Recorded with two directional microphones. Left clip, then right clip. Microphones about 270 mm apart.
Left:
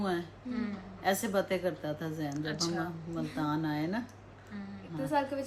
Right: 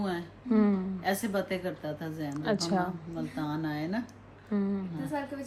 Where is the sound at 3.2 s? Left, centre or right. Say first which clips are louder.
Left 2 dB; centre.